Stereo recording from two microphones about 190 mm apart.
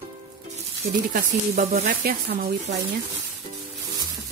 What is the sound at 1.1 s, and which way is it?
Speech, 45° right (ahead or behind).